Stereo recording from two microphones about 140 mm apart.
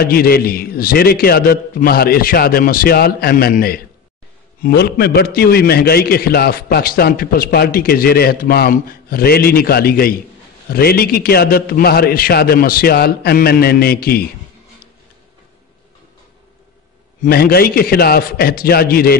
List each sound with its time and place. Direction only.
0.0 s a man's voice: 90° left
5.2 s a man's voice: 90° left
17.2 s a man's voice: 90° left